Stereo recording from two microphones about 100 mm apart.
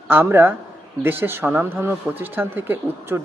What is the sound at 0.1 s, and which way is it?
Speech, 20° right (ahead or behind).